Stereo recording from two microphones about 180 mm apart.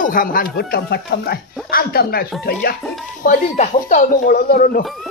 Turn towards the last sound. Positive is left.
turn(degrees=50)  # may be behind; listen again after turning